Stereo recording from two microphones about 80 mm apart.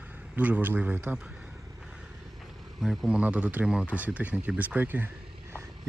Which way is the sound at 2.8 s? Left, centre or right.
Centre.